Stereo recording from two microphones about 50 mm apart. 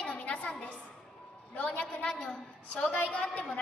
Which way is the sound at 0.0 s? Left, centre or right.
Left.